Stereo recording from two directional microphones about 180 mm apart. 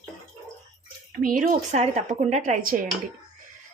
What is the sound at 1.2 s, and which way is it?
Speech, 50° right (ahead or behind).